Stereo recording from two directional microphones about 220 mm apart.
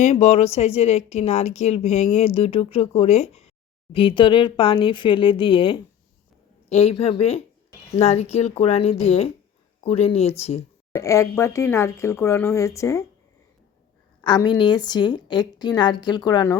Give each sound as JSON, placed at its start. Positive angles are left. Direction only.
{"t": 0.0, "sound": "a woman's voice", "side_deg": 30}
{"t": 10.9, "sound": "speech", "side_deg": 15}
{"t": 14.2, "sound": "a woman's voice", "side_deg": 20}